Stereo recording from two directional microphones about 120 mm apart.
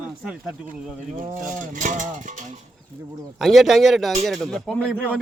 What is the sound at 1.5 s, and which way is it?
Speech, 90° right.